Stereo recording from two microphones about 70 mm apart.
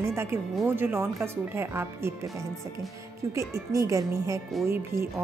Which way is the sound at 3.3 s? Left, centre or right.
Right.